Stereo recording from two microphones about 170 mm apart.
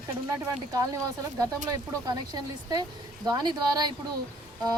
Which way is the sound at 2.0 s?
20° right (ahead or behind).